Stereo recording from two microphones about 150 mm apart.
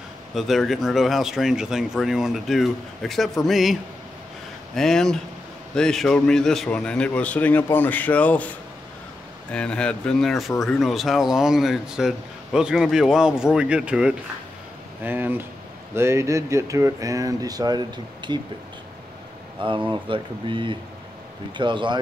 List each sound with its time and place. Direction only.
0.3 s speech: centre (ahead or behind)
4.7 s a man's voice: 5° left (ahead or behind)
9.5 s a man's voice: 5° left (ahead or behind); by 18.4 s 30° right (ahead or behind)
19.9 s speech: 35° right (ahead or behind)